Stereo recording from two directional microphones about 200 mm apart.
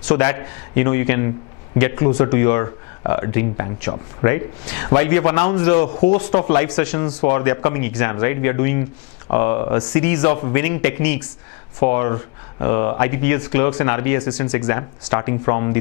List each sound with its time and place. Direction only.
0.1 s speech: 15° left (ahead or behind)